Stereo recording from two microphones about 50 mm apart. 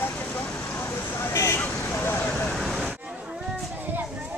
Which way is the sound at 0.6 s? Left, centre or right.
Left.